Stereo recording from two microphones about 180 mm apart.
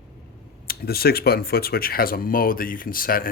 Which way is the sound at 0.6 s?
55° left (ahead or behind).